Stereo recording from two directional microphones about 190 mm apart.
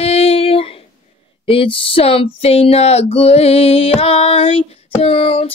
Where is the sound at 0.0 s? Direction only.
30° left (ahead or behind).